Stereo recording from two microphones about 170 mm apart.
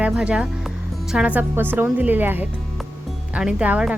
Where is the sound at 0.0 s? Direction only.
5° right (ahead or behind).